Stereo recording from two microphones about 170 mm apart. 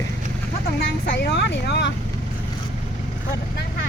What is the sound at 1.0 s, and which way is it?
Speech, 85° left.